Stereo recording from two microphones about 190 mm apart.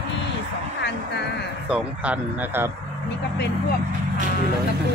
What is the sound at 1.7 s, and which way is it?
Speech, 5° right (ahead or behind).